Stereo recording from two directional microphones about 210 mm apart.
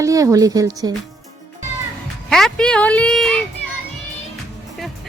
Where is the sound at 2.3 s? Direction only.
Centre (ahead or behind).